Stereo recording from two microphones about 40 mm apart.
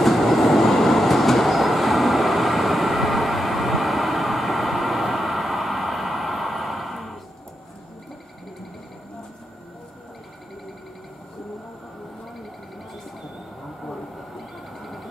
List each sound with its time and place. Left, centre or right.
0.0 s train: centre
14.3 s train: centre